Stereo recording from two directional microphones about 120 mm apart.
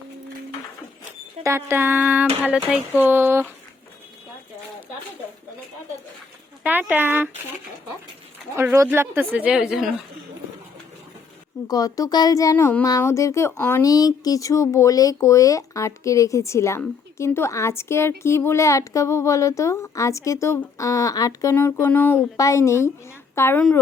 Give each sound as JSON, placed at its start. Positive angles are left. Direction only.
{"t": 1.5, "sound": "speech", "side_deg": -20}
{"t": 3.0, "sound": "a sound", "side_deg": -20}
{"t": 6.6, "sound": "speech", "side_deg": -15}
{"t": 8.5, "sound": "speech", "side_deg": -20}
{"t": 11.7, "sound": "a woman's voice", "side_deg": 30}
{"t": 13.8, "sound": "a woman's voice", "side_deg": 30}
{"t": 21.5, "sound": "a woman's voice", "side_deg": 15}
{"t": 23.6, "sound": "speech", "side_deg": 10}